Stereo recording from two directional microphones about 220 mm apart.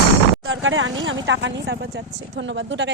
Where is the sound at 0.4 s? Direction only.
60° right (ahead or behind).